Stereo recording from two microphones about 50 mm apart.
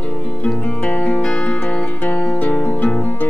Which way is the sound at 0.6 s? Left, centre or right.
Left.